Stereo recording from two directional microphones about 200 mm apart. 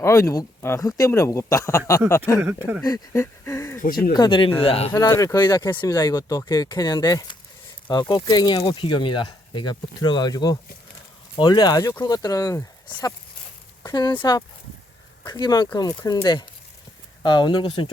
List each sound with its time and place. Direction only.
0.0 s speech: 15° left (ahead or behind)
2.4 s speech: 10° right (ahead or behind)
2.8 s speech: 15° left (ahead or behind)
4.9 s speech: 10° left (ahead or behind)